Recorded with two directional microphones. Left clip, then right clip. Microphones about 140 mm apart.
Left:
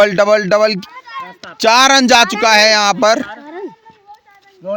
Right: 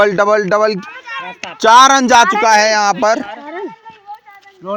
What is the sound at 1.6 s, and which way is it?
Speech, 90° left.